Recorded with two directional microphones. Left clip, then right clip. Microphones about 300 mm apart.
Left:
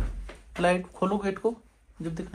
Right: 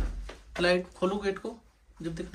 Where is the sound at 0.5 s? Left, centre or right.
Centre.